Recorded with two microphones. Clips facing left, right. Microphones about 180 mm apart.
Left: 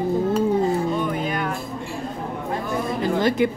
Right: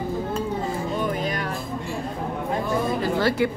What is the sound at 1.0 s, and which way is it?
Music, 40° right (ahead or behind).